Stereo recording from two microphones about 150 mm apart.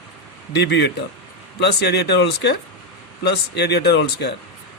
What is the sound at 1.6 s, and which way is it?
Speech, 90° left.